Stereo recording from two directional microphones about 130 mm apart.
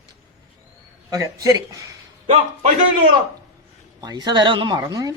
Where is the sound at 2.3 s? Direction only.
60° right (ahead or behind).